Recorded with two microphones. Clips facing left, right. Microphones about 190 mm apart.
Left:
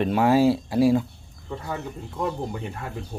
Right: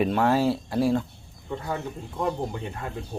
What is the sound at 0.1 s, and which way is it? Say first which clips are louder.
Speech: left 3 dB; 10° left (ahead or behind).